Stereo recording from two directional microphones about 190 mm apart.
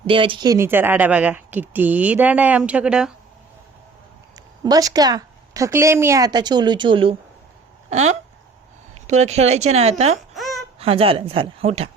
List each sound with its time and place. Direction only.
0.1 s speech: 25° right (ahead or behind); by 3.1 s 5° right (ahead or behind)
4.6 s a woman's voice: 20° right (ahead or behind); by 9.9 s 35° right (ahead or behind)
10.3 s babbling: centre (ahead or behind)
10.8 s a woman's voice: 30° right (ahead or behind)